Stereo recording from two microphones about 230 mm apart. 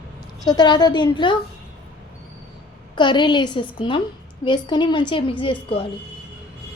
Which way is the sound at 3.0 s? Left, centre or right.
Centre.